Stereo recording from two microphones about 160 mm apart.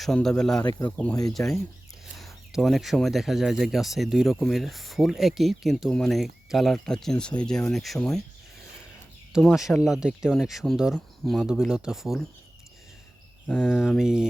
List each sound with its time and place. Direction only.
0.0 s speech: 5° left (ahead or behind)
0.6 s speech: 25° left (ahead or behind)
0.9 s speech: 10° left (ahead or behind)
2.5 s speech: centre (ahead or behind)
9.3 s speech: centre (ahead or behind)
13.6 s speech: 5° right (ahead or behind)